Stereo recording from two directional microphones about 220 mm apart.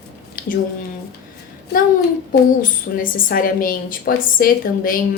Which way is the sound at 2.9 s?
45° left (ahead or behind).